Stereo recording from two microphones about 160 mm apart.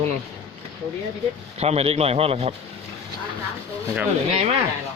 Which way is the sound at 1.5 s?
40° right (ahead or behind).